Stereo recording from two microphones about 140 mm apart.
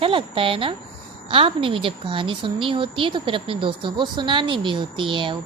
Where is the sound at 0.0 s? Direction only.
40° right (ahead or behind).